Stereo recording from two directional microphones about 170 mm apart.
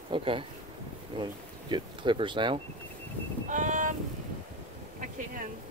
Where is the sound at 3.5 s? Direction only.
50° right (ahead or behind).